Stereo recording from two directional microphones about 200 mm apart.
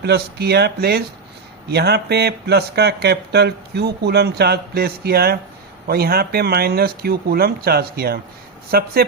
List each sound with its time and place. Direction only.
0.0 s speech: 55° right (ahead or behind)